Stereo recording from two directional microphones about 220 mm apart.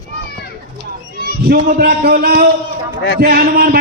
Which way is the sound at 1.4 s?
45° right (ahead or behind).